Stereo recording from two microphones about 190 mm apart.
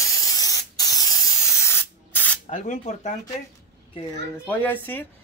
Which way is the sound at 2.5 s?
40° left (ahead or behind).